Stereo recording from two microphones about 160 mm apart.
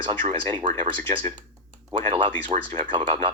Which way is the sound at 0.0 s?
35° right (ahead or behind).